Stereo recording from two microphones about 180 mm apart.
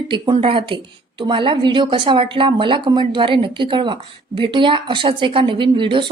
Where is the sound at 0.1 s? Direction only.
30° right (ahead or behind).